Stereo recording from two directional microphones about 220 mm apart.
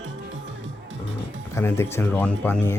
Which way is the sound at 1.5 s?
10° left (ahead or behind).